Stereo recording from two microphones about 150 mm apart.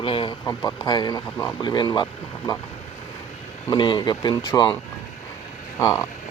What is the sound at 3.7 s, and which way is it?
Speech, 30° left (ahead or behind).